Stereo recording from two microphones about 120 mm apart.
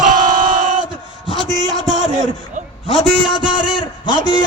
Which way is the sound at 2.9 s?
40° left (ahead or behind).